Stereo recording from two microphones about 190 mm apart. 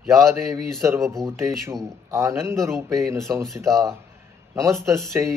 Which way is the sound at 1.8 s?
15° right (ahead or behind).